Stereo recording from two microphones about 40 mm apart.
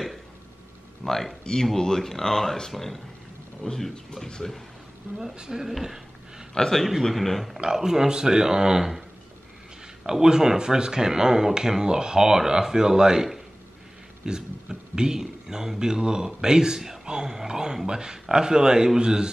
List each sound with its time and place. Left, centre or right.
1.0 s speech: centre
1.4 s a man's voice: centre
5.3 s speech: centre
6.5 s a man's voice: centre
7.7 s speech: centre
10.0 s speech: centre